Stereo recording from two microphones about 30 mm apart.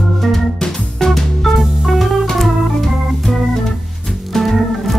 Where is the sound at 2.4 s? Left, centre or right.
Centre.